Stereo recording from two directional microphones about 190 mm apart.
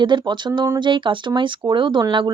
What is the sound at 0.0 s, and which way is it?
Speech, 25° right (ahead or behind).